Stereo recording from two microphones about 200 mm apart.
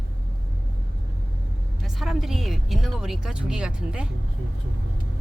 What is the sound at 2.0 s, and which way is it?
Speech, centre (ahead or behind).